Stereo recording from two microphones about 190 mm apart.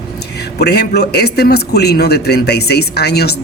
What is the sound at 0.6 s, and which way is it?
Speech, 60° left (ahead or behind).